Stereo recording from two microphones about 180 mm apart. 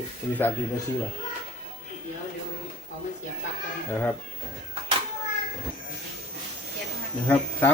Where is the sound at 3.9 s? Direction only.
10° left (ahead or behind).